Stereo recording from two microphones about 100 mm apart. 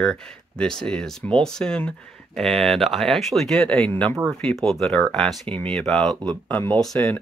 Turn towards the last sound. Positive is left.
turn(degrees=5)  # may be behind; listen again after turning